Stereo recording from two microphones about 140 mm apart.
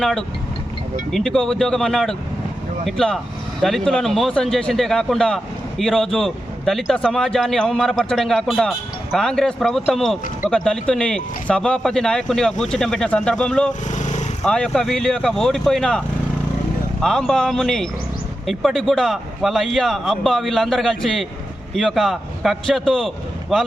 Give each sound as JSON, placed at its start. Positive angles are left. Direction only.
{"t": 0.0, "sound": "a man's voice", "side_deg": 0}
{"t": 13.9, "sound": "vehicle", "side_deg": 55}
{"t": 14.4, "sound": "a man's voice", "side_deg": 5}